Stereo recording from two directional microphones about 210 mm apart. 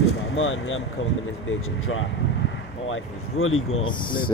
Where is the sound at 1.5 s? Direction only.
80° left.